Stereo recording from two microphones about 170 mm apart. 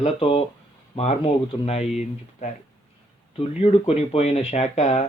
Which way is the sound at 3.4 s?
35° left (ahead or behind).